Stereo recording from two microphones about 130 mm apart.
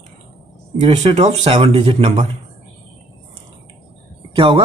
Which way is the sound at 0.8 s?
55° right (ahead or behind).